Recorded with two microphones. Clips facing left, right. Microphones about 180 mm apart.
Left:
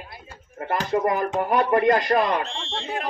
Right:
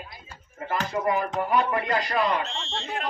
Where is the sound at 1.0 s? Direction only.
50° left (ahead or behind).